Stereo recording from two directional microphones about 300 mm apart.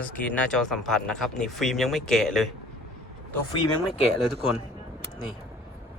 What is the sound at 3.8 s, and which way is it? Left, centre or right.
Speech, centre.